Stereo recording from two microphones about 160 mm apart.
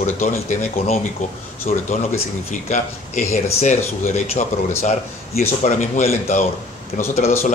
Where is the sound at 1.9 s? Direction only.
45° left (ahead or behind).